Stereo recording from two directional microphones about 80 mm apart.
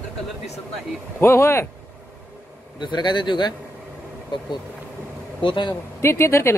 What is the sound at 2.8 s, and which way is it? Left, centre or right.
Speech, left.